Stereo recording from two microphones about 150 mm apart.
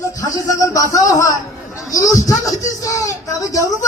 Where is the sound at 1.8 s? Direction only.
20° left (ahead or behind).